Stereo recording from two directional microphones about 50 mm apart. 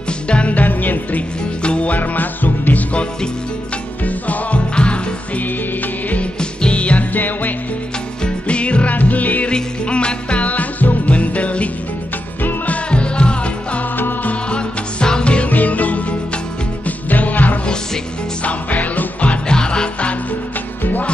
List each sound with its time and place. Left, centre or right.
0.3 s music: left
1.6 s music: left
2.9 s music: left
6.6 s music: left
8.2 s music: left
9.5 s music: left
12.4 s music: left
12.9 s music: left
13.9 s music: left
14.5 s music: centre
19.5 s music: centre
20.8 s music: left